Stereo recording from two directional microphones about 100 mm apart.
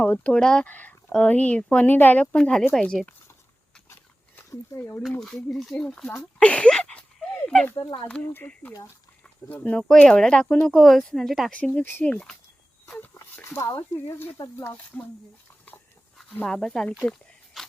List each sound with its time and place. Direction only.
0.0 s speech: 15° left (ahead or behind)
4.8 s speech: 20° left (ahead or behind)
5.2 s speech: centre (ahead or behind)
6.4 s a sound: 10° left (ahead or behind)
7.8 s speech: 45° left (ahead or behind)
8.0 s speech: 10° left (ahead or behind)
11.5 s speech: 10° left (ahead or behind)
13.1 s speech: 25° left (ahead or behind)
16.5 s speech: 5° left (ahead or behind)
17.0 s a sound: 5° left (ahead or behind)